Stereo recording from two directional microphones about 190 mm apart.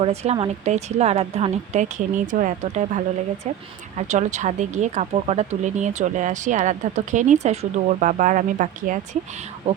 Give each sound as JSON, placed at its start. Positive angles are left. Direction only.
{"t": 0.0, "sound": "speech", "side_deg": -35}